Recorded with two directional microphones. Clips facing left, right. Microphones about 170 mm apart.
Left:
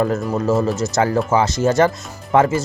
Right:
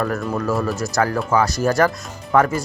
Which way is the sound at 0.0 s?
20° left (ahead or behind).